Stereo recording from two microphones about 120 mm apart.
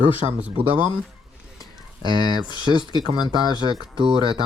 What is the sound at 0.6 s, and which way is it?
Speech, 50° right (ahead or behind).